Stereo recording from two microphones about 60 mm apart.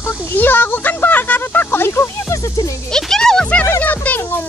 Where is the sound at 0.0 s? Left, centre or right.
Left.